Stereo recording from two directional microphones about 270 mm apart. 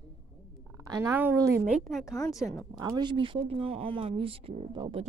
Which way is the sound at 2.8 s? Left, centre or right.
Centre.